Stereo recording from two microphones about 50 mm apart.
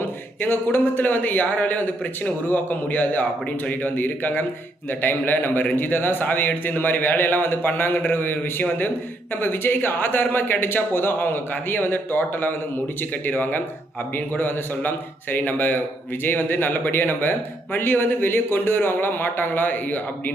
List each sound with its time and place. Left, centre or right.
0.0 s speech: left